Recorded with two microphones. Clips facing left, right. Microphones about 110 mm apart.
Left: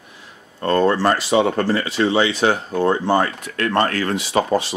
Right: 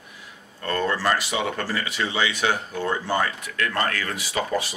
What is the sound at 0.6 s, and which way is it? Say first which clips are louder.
Speech: left 8 dB; 35° left (ahead or behind).